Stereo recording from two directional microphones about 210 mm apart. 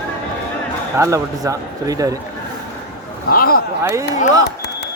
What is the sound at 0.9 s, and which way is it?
Speech, 15° right (ahead or behind).